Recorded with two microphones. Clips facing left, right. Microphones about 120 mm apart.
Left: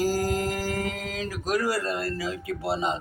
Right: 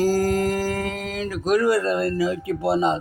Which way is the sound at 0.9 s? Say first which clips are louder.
Right 4 dB; 25° right (ahead or behind).